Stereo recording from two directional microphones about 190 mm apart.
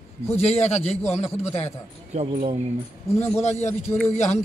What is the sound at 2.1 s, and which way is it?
Speech, 30° right (ahead or behind).